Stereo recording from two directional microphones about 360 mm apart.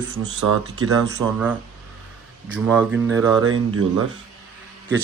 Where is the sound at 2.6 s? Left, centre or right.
Centre.